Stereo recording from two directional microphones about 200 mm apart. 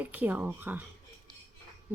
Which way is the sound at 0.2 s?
10° right (ahead or behind).